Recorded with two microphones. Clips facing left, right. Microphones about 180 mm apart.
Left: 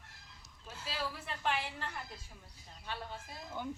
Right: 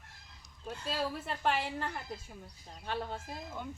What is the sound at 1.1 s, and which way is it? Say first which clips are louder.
A woman's voice: right 4 dB; 50° right (ahead or behind).